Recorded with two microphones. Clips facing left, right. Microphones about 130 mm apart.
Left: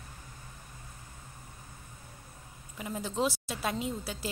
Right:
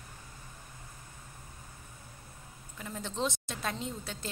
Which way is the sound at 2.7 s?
10° left (ahead or behind).